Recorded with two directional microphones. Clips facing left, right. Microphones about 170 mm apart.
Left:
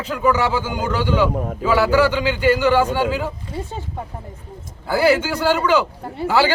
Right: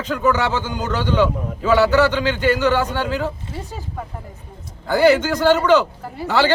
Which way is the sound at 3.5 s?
25° left (ahead or behind).